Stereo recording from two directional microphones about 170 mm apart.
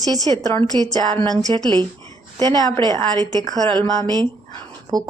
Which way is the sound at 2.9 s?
20° left (ahead or behind).